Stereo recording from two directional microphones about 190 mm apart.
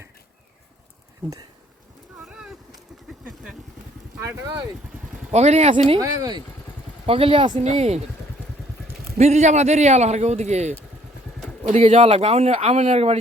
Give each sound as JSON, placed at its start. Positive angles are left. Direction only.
{"t": 2.2, "sound": "a sound", "side_deg": -5}
{"t": 4.2, "sound": "speech", "side_deg": -20}
{"t": 5.3, "sound": "speech", "side_deg": -35}
{"t": 7.1, "sound": "speech", "side_deg": -30}
{"t": 9.1, "sound": "speech", "side_deg": -35}